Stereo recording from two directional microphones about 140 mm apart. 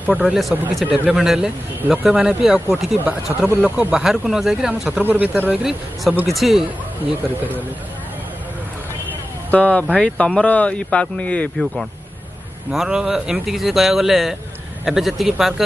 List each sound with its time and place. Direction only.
0.0 s speech: 10° right (ahead or behind)
9.5 s speech: 10° left (ahead or behind)
12.7 s speech: 5° right (ahead or behind)